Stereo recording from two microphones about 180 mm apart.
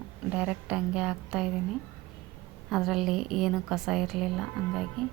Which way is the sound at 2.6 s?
Centre (ahead or behind).